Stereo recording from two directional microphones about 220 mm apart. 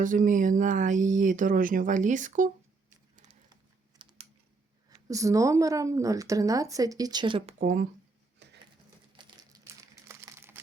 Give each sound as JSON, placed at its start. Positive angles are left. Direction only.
{"t": 0.0, "sound": "speech", "side_deg": -35}
{"t": 3.2, "sound": "typing", "side_deg": -25}
{"t": 5.0, "sound": "speech", "side_deg": -15}
{"t": 7.6, "sound": "speech", "side_deg": -35}
{"t": 8.4, "sound": "crushing", "side_deg": -50}
{"t": 9.1, "sound": "crumpling", "side_deg": -15}